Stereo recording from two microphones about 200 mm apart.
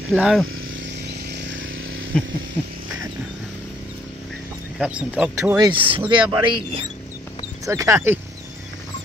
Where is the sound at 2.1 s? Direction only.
5° left (ahead or behind).